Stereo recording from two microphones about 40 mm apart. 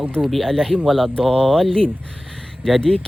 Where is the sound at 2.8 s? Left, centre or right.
Left.